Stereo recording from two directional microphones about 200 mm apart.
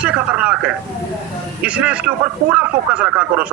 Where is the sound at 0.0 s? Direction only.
5° right (ahead or behind).